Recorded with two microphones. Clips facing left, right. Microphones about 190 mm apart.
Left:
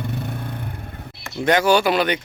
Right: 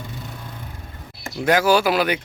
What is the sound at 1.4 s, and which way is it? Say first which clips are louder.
Speech: even; 5° right (ahead or behind).